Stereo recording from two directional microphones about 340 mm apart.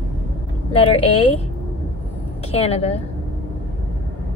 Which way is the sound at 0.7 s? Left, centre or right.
Centre.